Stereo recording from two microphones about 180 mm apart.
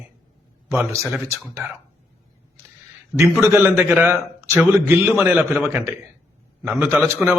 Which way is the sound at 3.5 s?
10° right (ahead or behind).